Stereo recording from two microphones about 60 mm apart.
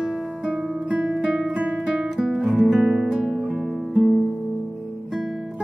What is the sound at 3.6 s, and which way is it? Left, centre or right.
Music, centre.